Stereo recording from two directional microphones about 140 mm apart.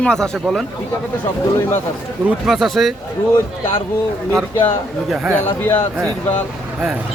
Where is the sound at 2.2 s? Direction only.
5° right (ahead or behind).